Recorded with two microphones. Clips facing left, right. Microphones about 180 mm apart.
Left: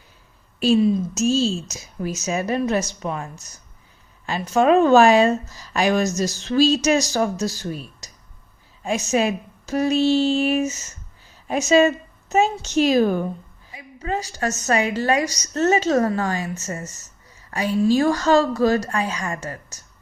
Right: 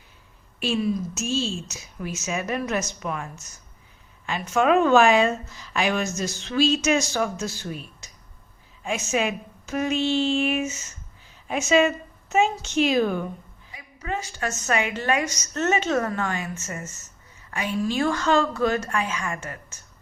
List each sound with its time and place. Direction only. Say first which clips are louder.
0.8 s speech: left 3 dB; 25° left (ahead or behind)
1.1 s a woman's voice: left 7 dB; 40° left (ahead or behind)